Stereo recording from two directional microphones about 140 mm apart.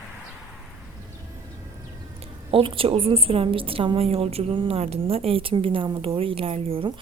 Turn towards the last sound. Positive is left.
turn(degrees=-40)  # may be behind; listen again after turning